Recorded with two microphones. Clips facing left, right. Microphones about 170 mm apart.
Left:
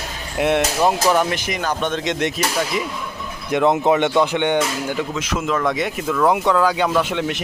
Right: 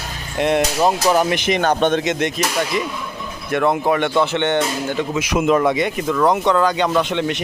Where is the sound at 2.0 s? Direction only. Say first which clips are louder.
Right 1 dB; 5° right (ahead or behind).